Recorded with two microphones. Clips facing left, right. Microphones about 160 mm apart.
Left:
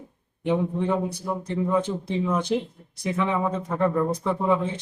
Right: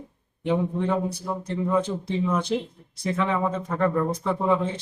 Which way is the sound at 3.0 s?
10° left (ahead or behind).